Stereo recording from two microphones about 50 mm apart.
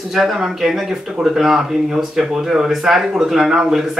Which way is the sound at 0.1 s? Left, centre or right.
Centre.